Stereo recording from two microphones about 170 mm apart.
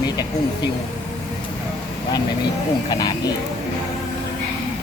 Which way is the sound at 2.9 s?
25° left (ahead or behind).